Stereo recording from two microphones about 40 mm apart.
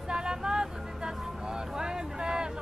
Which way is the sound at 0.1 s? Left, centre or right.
Centre.